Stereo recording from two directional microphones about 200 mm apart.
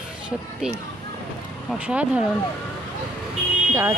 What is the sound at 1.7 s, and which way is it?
Speech, 5° right (ahead or behind).